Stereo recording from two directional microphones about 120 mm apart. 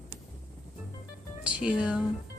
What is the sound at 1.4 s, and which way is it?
Music, 10° right (ahead or behind).